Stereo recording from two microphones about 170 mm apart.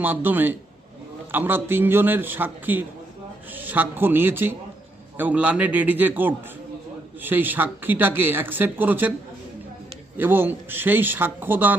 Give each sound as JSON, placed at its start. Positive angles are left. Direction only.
{"t": 0.0, "sound": "speech", "side_deg": -10}
{"t": 10.2, "sound": "speech", "side_deg": -10}